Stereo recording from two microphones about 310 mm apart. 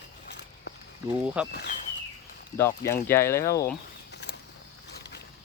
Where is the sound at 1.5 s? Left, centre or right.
Left.